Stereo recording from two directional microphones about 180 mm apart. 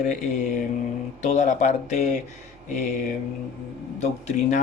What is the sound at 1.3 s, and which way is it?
Speech, 40° left (ahead or behind).